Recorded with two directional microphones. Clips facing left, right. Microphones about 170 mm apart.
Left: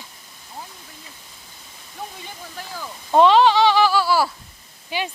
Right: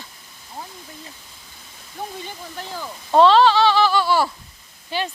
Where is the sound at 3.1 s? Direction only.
15° left (ahead or behind).